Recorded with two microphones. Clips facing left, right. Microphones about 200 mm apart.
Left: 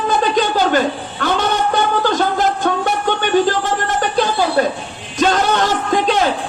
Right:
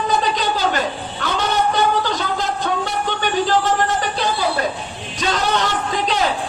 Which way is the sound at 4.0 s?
50° left (ahead or behind).